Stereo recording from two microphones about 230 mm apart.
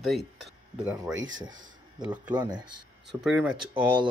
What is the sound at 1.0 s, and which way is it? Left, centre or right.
Speech, centre.